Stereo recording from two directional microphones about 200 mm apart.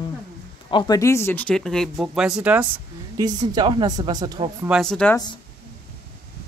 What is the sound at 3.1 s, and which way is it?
Speech, 20° right (ahead or behind).